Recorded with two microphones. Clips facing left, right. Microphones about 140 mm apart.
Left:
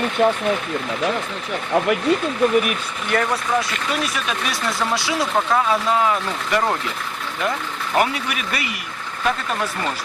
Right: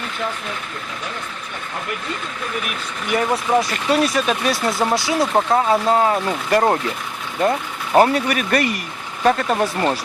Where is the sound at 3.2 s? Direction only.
30° right (ahead or behind).